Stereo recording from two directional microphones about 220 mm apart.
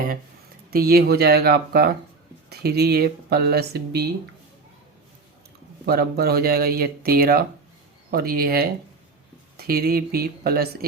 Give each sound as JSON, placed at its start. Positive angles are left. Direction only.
{"t": 0.7, "sound": "speech", "side_deg": -45}
{"t": 5.8, "sound": "speech", "side_deg": -45}